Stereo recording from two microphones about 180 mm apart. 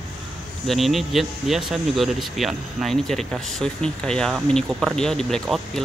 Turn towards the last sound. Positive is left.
turn(degrees=0)  # may be behind; listen again after turning